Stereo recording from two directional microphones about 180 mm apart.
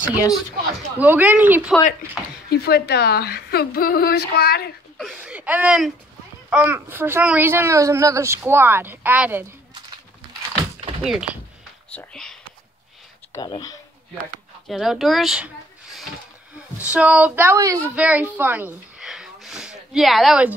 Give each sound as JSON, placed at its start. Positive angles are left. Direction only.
{"t": 0.9, "sound": "a child's voice", "side_deg": -10}
{"t": 2.5, "sound": "a woman's voice", "side_deg": 60}
{"t": 4.9, "sound": "a sound", "side_deg": 0}
{"t": 6.5, "sound": "a child's voice", "side_deg": -10}
{"t": 11.0, "sound": "speech", "side_deg": -5}
{"t": 11.9, "sound": "whispering", "side_deg": 5}
{"t": 13.3, "sound": "speech", "side_deg": 20}
{"t": 14.7, "sound": "a child's voice", "side_deg": 0}